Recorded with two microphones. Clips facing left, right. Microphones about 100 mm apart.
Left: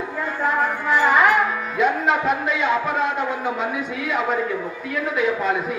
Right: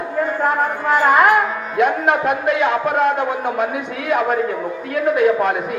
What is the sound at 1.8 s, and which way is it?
A man's voice, 60° right (ahead or behind).